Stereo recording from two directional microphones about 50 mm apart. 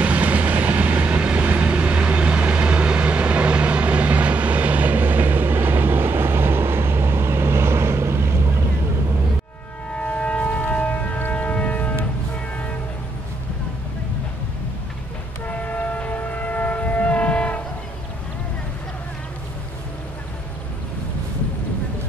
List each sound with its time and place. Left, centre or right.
0.0 s vehicle: right
9.9 s civil defense siren: left
11.2 s a sound: left
15.4 s train: left